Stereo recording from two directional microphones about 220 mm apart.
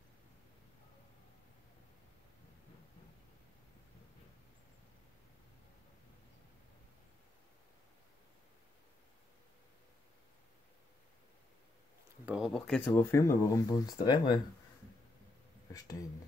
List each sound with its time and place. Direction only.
12.3 s speech: centre (ahead or behind); by 14.4 s 20° left (ahead or behind)
15.7 s speech: 15° left (ahead or behind)